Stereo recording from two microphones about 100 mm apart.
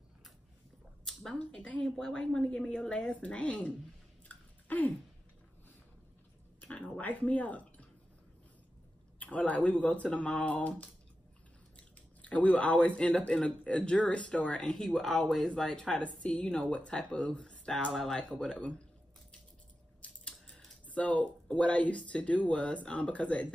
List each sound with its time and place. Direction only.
1.0 s speech: 10° left (ahead or behind)
4.3 s chewing: 15° left (ahead or behind)
6.6 s speech: 15° left (ahead or behind)
9.2 s speech: 15° left (ahead or behind)
11.7 s speech: 15° left (ahead or behind)
20.0 s speech: 10° left (ahead or behind)